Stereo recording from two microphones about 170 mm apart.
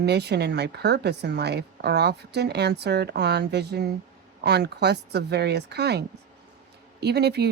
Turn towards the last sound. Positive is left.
turn(degrees=-75)  # may be behind; listen again after turning